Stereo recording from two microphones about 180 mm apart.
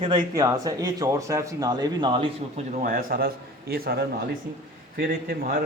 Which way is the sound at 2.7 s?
50° right (ahead or behind).